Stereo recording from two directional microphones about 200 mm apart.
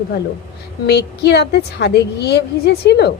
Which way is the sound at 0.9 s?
55° left (ahead or behind).